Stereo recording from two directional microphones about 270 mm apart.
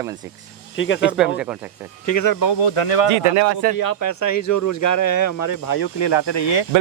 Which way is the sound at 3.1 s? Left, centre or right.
Right.